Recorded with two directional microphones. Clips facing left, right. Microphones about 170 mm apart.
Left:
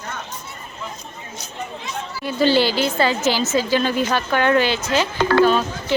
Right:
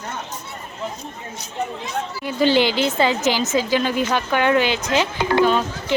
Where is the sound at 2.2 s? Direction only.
15° right (ahead or behind).